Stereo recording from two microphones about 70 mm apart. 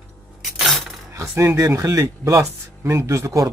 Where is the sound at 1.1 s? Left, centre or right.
Right.